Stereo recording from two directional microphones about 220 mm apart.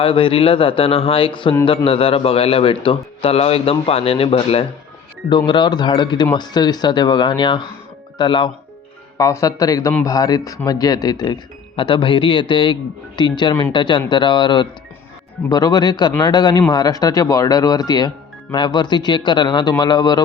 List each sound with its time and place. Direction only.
0.0 s a man's voice: 25° left (ahead or behind)